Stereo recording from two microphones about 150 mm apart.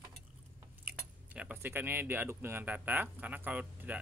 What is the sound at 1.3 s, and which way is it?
Speech, 10° right (ahead or behind).